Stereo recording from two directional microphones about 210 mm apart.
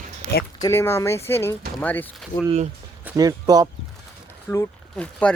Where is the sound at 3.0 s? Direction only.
15° right (ahead or behind).